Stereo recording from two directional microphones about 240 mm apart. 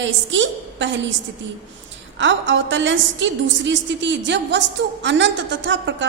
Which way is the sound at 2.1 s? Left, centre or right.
Right.